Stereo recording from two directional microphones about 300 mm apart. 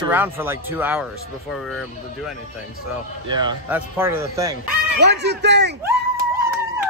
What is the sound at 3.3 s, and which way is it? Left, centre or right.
Speech, centre.